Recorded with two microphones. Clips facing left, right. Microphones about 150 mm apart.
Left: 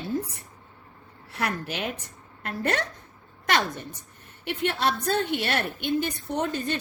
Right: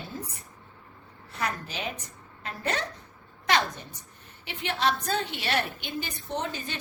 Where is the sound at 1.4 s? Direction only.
60° left (ahead or behind).